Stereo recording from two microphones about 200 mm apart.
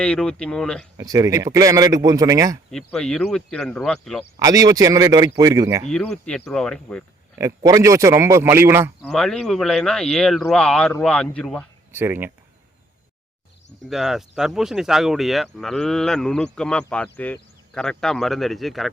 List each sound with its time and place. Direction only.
0.0 s speech: 5° left (ahead or behind)
0.9 s a man's voice: 20° right (ahead or behind)
2.6 s speech: 5° left (ahead or behind)
4.4 s a man's voice: 15° right (ahead or behind)
5.9 s speech: 5° left (ahead or behind)
7.3 s a man's voice: 15° right (ahead or behind)
9.0 s speech: centre (ahead or behind)
11.9 s speech: 10° right (ahead or behind)
13.9 s speech: centre (ahead or behind)